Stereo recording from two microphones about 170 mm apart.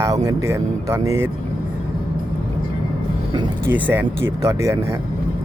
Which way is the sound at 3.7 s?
10° right (ahead or behind).